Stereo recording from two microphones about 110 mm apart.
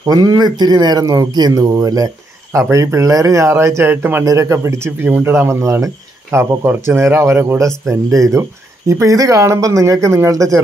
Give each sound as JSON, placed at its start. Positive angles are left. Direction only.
{"t": 0.0, "sound": "speech", "side_deg": -35}